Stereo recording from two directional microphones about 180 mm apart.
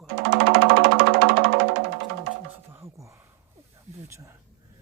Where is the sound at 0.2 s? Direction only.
70° right (ahead or behind).